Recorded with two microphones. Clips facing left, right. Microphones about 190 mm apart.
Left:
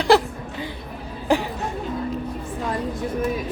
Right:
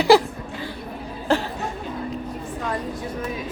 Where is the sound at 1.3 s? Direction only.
15° left (ahead or behind).